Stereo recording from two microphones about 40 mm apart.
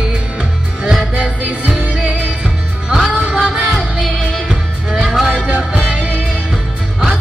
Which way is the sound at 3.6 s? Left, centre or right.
Centre.